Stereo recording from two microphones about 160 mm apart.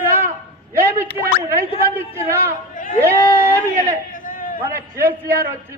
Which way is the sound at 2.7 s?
60° left (ahead or behind).